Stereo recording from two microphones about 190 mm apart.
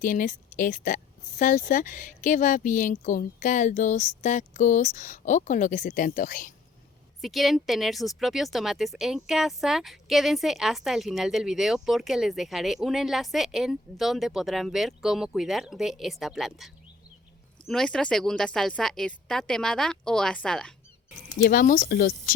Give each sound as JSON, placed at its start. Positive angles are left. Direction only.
{"t": 0.0, "sound": "speech", "side_deg": 45}
{"t": 7.2, "sound": "a woman's voice", "side_deg": 0}
{"t": 21.4, "sound": "speech", "side_deg": 45}